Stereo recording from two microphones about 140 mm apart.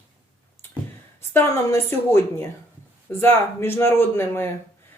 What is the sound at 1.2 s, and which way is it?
Speech, 15° left (ahead or behind).